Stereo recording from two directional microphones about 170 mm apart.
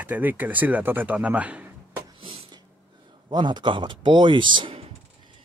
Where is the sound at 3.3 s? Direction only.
25° right (ahead or behind).